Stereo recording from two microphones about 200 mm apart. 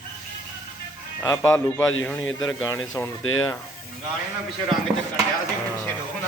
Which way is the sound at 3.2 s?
90° left.